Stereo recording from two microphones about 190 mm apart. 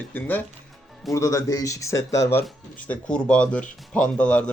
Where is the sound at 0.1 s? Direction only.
10° left (ahead or behind).